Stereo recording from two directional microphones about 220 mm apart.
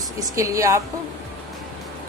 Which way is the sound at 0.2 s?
15° right (ahead or behind).